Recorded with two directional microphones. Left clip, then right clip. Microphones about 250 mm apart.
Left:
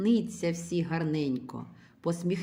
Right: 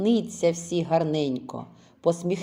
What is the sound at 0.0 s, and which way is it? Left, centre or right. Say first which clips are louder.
A woman's voice: right 6 dB; left.